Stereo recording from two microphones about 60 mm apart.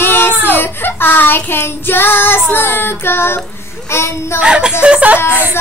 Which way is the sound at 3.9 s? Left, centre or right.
Left.